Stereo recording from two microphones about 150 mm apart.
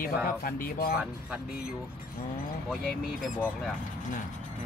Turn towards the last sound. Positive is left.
turn(degrees=10)  # may be behind; listen again after turning